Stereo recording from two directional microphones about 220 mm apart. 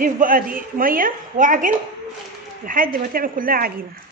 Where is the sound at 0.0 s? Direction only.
40° right (ahead or behind).